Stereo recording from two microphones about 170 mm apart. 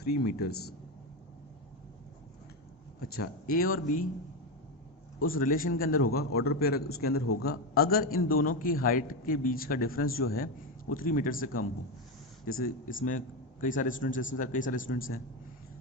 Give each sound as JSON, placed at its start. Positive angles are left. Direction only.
{"t": 0.0, "sound": "speech", "side_deg": 70}
{"t": 3.0, "sound": "a man's voice", "side_deg": 60}
{"t": 5.2, "sound": "a man's voice", "side_deg": 55}